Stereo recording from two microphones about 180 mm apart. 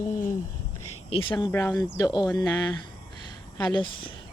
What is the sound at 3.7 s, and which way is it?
Speech, 25° left (ahead or behind).